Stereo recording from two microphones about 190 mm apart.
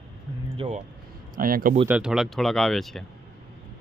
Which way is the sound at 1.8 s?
5° right (ahead or behind).